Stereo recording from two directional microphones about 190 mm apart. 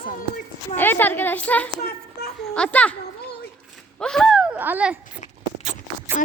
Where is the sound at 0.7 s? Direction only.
10° left (ahead or behind).